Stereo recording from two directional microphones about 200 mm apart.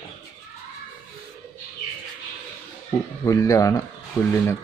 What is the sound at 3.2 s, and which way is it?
Speech, 15° left (ahead or behind).